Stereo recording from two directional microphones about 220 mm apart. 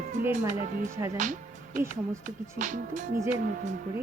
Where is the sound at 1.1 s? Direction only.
35° right (ahead or behind).